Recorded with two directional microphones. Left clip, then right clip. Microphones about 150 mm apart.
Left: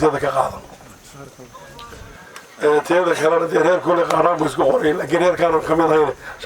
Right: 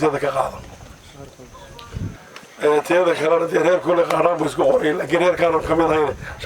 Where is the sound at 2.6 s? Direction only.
Centre (ahead or behind).